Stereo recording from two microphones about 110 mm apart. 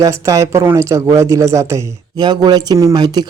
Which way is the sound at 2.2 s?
40° right (ahead or behind).